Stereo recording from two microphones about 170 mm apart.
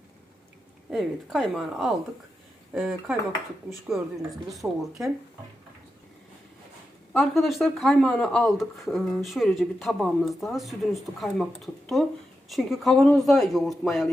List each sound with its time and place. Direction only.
0.9 s speech: centre (ahead or behind)
7.1 s speech: centre (ahead or behind)